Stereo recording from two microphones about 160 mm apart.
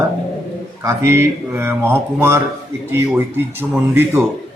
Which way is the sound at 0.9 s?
15° right (ahead or behind).